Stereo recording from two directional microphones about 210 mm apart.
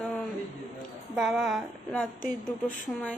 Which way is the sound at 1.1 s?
Centre (ahead or behind).